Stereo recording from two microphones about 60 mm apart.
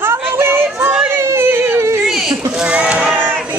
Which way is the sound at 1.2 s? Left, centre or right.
Right.